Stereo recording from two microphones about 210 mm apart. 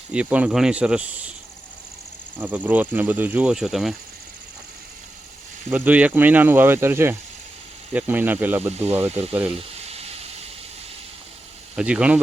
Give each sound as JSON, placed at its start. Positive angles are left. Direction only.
{"t": 0.1, "sound": "speech", "side_deg": -5}
{"t": 2.4, "sound": "speech", "side_deg": -10}
{"t": 5.7, "sound": "speech", "side_deg": -5}
{"t": 9.6, "sound": "a sound", "side_deg": -30}
{"t": 11.8, "sound": "speech", "side_deg": -5}